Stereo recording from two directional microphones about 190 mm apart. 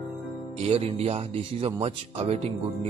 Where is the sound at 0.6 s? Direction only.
30° right (ahead or behind).